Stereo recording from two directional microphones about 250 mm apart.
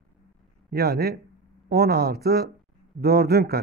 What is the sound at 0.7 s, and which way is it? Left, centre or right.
Speech, right.